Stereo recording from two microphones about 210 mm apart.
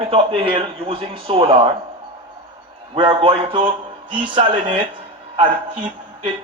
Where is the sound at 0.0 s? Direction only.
25° right (ahead or behind).